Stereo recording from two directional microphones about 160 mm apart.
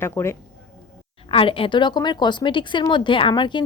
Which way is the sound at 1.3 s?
35° left (ahead or behind).